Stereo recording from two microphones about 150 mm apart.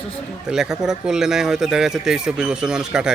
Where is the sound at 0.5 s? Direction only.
5° right (ahead or behind).